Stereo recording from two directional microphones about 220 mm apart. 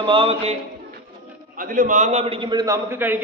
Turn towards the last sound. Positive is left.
turn(degrees=-10)  # may be behind; listen again after turning